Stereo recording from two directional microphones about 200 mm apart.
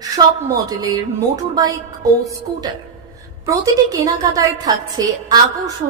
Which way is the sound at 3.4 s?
15° right (ahead or behind).